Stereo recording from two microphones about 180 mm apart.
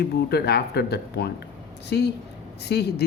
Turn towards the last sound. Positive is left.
turn(degrees=65)  # may be behind; listen again after turning